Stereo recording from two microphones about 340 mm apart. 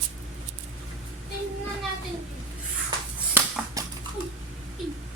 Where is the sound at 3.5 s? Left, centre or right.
Centre.